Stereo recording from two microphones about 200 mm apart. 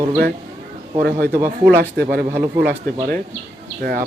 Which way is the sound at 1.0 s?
55° right (ahead or behind).